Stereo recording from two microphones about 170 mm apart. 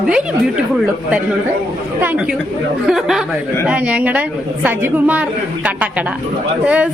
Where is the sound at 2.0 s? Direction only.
10° right (ahead or behind).